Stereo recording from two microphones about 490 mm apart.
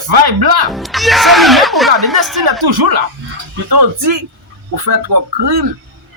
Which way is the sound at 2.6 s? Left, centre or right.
Right.